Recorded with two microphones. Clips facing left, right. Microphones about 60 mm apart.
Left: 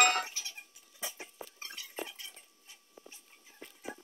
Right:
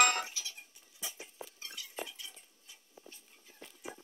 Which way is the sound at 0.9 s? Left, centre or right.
Left.